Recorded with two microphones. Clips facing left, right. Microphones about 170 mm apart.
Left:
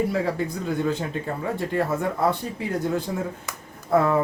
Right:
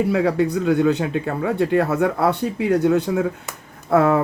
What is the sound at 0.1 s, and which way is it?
Speech, 70° right (ahead or behind).